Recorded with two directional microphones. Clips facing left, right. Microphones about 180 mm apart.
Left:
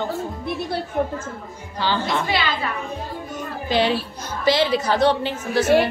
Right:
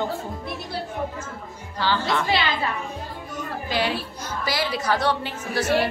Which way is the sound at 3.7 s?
25° left (ahead or behind).